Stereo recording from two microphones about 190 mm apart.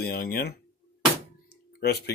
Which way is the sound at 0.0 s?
50° left (ahead or behind).